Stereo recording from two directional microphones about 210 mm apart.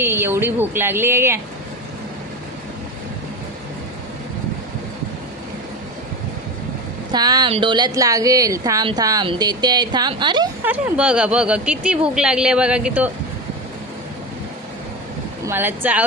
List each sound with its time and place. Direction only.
0.0 s speech: 10° right (ahead or behind)
7.1 s a woman's voice: 20° right (ahead or behind)
10.6 s speech: 5° right (ahead or behind)
15.4 s speech: 10° right (ahead or behind)